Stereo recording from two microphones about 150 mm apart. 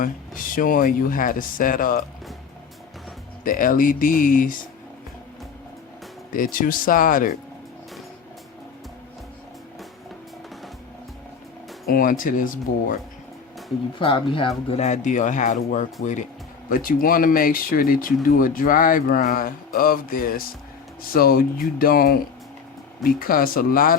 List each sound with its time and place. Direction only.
0.0 s speech: 65° left (ahead or behind)
3.4 s speech: 65° left (ahead or behind)
6.3 s speech: 65° left (ahead or behind)
11.9 s speech: 70° left (ahead or behind)
14.0 s speech: 35° left (ahead or behind); by 15.9 s 55° left (ahead or behind)
16.6 s speech: 65° left (ahead or behind)
21.1 s speech: 80° left